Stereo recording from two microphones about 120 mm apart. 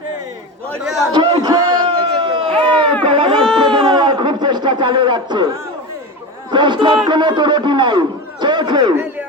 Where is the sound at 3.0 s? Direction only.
45° right (ahead or behind).